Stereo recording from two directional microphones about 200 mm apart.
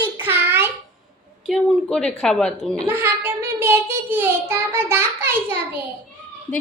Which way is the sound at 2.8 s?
10° right (ahead or behind).